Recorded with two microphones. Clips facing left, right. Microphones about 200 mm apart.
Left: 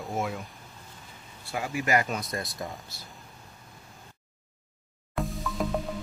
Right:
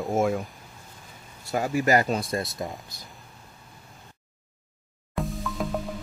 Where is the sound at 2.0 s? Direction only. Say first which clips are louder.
Right 6 dB; 30° right (ahead or behind).